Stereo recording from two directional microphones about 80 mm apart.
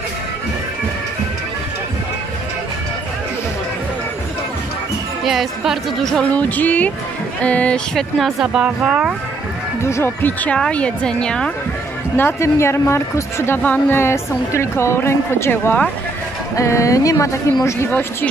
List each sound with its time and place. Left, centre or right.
5.2 s speech: centre
6.3 s music: left
7.4 s a woman's voice: centre
7.9 s speech: centre
8.5 s speech: centre
9.8 s speech: left
10.2 s music: centre
10.6 s a woman's voice: centre
12.2 s speech: left
13.6 s speech: left
16.5 s speech: left